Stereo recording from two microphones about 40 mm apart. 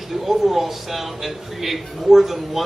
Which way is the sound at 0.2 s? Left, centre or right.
Centre.